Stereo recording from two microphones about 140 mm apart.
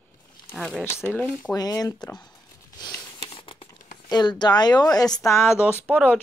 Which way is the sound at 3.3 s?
40° left (ahead or behind).